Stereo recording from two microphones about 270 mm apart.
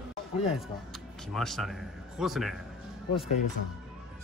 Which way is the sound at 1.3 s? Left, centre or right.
Centre.